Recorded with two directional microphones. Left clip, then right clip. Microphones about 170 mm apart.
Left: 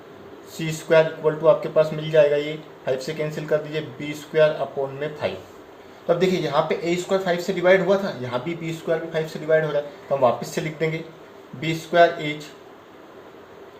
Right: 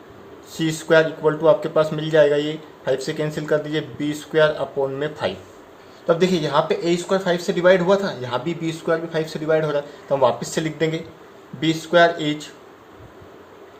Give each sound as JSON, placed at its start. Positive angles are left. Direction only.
{"t": 0.6, "sound": "speech", "side_deg": -45}